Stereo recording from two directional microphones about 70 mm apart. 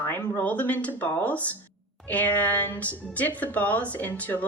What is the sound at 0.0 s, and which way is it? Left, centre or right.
Speech, left.